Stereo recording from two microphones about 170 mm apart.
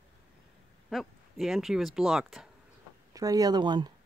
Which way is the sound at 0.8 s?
Centre (ahead or behind).